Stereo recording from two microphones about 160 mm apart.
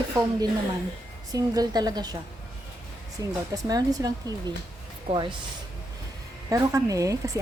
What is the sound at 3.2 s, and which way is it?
Speech, 20° right (ahead or behind).